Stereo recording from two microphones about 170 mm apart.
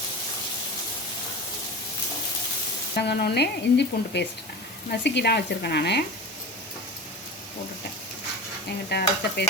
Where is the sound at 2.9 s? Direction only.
75° left (ahead or behind).